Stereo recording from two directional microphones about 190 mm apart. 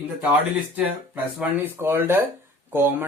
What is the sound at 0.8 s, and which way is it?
Speech, 10° right (ahead or behind).